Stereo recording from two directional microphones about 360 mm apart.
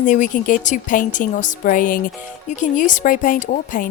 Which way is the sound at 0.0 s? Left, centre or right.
Left.